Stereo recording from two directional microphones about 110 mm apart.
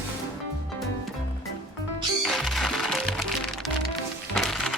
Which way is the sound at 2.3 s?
Centre (ahead or behind).